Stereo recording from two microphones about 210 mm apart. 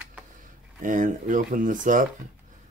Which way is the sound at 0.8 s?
40° right (ahead or behind).